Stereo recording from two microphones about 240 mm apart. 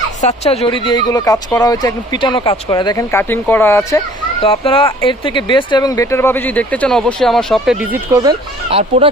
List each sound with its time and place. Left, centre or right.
0.2 s speech: left; by 7.8 s centre
8.1 s speech: centre